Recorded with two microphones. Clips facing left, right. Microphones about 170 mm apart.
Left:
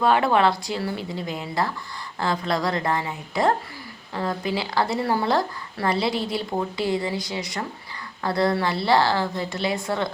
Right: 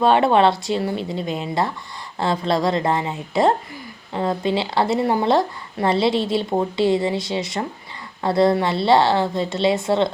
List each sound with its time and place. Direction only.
0.0 s speech: 25° right (ahead or behind)